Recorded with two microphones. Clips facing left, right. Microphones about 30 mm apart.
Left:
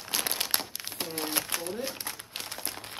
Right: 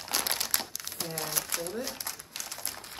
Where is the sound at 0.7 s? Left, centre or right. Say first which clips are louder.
Left 1 dB; left.